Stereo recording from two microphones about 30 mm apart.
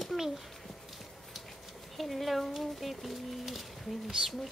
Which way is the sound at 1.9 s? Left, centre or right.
Centre.